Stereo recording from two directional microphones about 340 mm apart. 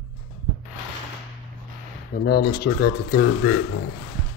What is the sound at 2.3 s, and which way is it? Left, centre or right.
A man's voice, left.